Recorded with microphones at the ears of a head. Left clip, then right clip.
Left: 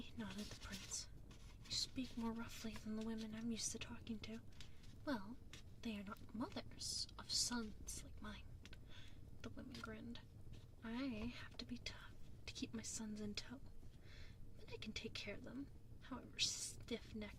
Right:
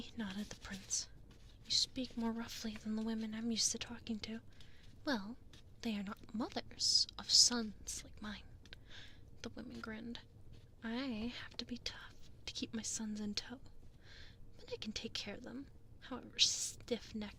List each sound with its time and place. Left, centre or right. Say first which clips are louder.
0.0 s whispering: right 6 dB; right
1.6 s a woman's voice: right 9 dB; right
14.1 s whispering: right 7 dB; right
16.0 s a woman's voice: right 9 dB; right